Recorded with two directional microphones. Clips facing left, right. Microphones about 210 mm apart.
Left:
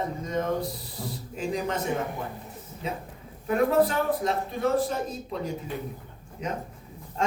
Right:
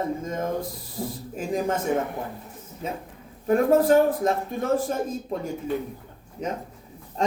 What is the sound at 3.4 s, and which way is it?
Speech, 45° right (ahead or behind).